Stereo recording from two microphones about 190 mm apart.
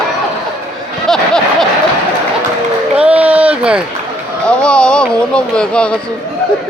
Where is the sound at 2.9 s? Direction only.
5° right (ahead or behind).